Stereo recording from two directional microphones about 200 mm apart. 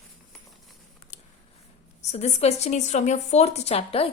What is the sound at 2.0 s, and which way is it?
A woman's voice, 35° left (ahead or behind).